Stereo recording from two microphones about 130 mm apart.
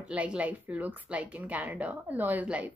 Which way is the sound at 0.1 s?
10° right (ahead or behind).